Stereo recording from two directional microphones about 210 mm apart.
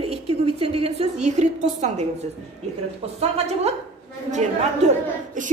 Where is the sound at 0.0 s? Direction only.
25° right (ahead or behind).